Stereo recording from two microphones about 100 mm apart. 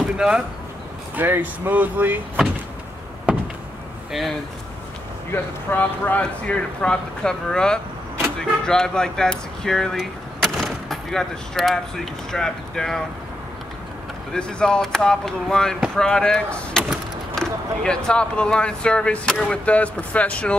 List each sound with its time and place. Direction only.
0.0 s speech: 10° right (ahead or behind)
1.1 s speech: 20° right (ahead or behind)
3.3 s a sound: 10° right (ahead or behind)
5.3 s speech: 20° left (ahead or behind)
14.3 s speech: 5° left (ahead or behind)